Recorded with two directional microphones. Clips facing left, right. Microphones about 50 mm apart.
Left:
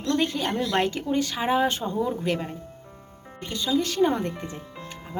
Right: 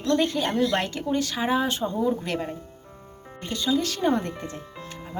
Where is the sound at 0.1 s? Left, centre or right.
Centre.